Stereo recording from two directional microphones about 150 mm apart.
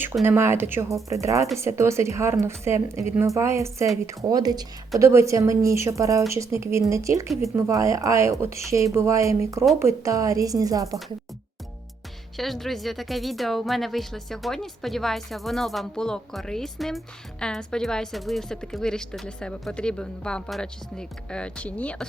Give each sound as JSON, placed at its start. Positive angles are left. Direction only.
{"t": 0.3, "sound": "a woman's voice", "side_deg": -15}
{"t": 12.4, "sound": "speech", "side_deg": 0}